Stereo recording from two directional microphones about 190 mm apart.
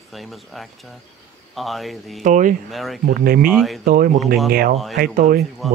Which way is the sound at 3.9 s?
50° right (ahead or behind).